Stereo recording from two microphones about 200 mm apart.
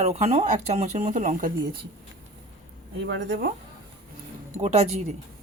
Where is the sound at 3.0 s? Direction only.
60° right (ahead or behind).